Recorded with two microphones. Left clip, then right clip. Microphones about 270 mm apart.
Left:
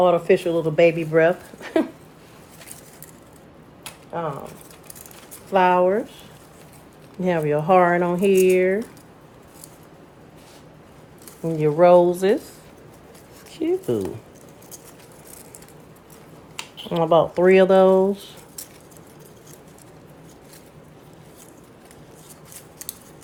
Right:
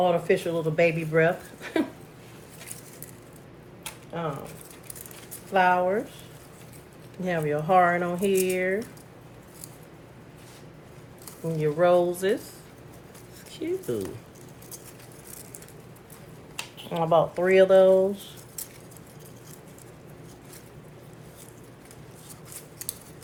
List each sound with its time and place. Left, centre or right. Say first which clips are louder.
0.0 s speech: left 6 dB; left
5.5 s speech: left 5 dB; left
7.2 s speech: left 6 dB; left
11.6 s speech: left 7 dB; left
13.5 s speech: left 7 dB; left
16.7 s speech: left 5 dB; left